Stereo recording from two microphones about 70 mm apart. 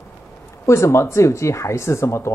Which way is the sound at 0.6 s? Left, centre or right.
Left.